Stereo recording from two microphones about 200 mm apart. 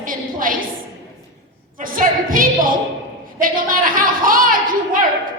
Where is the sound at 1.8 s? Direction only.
45° right (ahead or behind).